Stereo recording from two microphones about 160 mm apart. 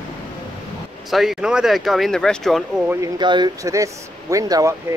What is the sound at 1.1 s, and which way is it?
Speech, centre (ahead or behind).